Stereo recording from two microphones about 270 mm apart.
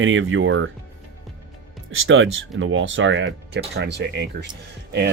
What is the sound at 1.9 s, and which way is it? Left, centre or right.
Speech, right.